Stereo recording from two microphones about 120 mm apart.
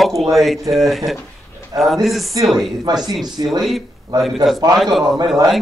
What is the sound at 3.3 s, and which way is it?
Speech, 35° right (ahead or behind).